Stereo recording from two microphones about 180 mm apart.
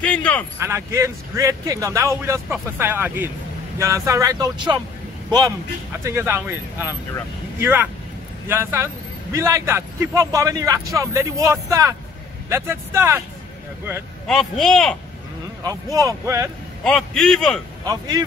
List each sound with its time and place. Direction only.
0.0 s speech: 5° left (ahead or behind)
0.6 s a man's voice: 15° right (ahead or behind)
6.0 s a man's voice: 15° right (ahead or behind)
14.2 s speech: centre (ahead or behind)
15.6 s speech: 20° right (ahead or behind)
16.8 s speech: 5° left (ahead or behind)
17.8 s speech: 20° right (ahead or behind)